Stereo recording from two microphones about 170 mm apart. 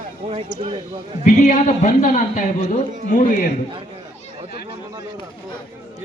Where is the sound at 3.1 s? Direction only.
50° left (ahead or behind).